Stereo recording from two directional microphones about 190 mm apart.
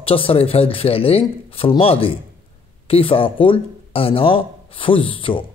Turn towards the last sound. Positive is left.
turn(degrees=25)  # may be behind; listen again after turning